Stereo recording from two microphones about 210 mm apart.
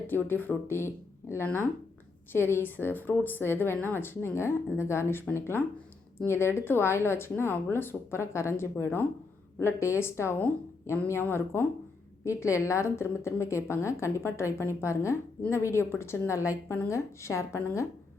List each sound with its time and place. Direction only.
0.1 s speech: 10° left (ahead or behind)